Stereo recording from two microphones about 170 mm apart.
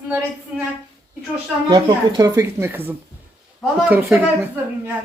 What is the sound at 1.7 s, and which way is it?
Speech, 20° right (ahead or behind).